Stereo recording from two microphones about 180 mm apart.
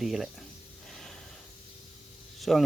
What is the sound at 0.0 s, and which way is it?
Speech, centre (ahead or behind).